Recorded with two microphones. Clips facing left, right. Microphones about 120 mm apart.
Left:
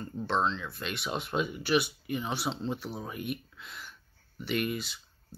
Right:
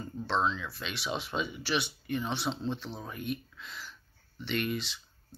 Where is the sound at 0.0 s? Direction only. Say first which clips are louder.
Left 1 dB; 5° right (ahead or behind).